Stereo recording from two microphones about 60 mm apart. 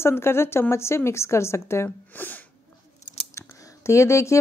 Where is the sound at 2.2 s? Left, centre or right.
Left.